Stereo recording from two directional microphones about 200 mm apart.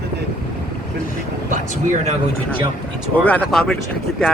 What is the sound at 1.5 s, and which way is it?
Speech, 35° right (ahead or behind).